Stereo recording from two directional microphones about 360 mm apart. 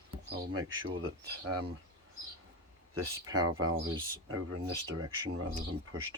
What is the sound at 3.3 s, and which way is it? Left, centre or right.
Speech, right.